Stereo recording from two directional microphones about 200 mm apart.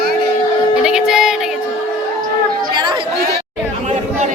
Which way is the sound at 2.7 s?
25° right (ahead or behind).